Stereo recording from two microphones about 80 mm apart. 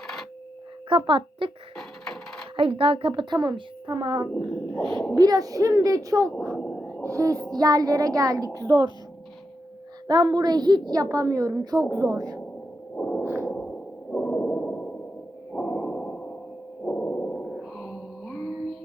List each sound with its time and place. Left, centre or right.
0.9 s speech: right
1.7 s printer: centre
2.6 s a woman's voice: right
5.1 s speech: right
6.6 s a sound: centre
7.0 s speech: right
7.5 s speech: right
10.1 s a woman's voice: right
13.0 s a sound: centre
13.2 s a sound: right
13.5 s sonar: centre
15.5 s a sound: centre